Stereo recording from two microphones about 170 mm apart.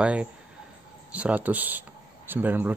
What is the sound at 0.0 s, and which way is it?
Speech, 5° right (ahead or behind).